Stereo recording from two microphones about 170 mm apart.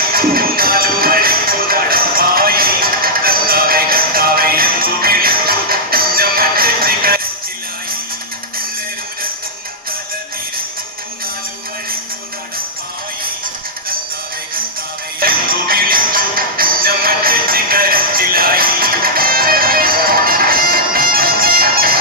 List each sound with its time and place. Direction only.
0.1 s music: 60° right (ahead or behind)
15.2 s music: 60° right (ahead or behind)